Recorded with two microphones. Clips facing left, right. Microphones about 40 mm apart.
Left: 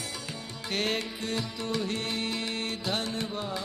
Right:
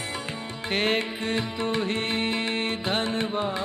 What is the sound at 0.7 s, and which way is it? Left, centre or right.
Music, right.